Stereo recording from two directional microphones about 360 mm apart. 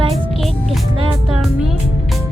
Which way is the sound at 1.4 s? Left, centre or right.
Centre.